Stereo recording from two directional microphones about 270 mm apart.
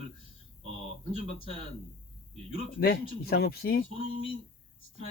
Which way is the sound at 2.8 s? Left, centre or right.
Left.